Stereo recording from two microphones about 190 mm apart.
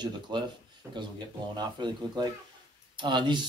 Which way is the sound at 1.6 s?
20° right (ahead or behind).